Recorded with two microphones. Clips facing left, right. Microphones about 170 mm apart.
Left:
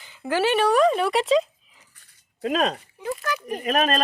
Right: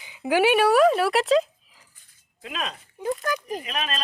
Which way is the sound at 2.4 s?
40° left (ahead or behind).